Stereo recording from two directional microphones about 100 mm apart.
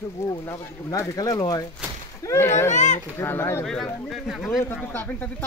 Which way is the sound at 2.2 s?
25° left (ahead or behind).